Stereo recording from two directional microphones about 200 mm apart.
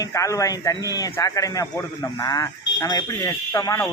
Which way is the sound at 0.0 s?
15° left (ahead or behind).